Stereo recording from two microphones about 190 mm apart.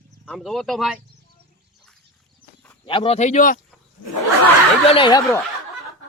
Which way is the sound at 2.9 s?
30° left (ahead or behind).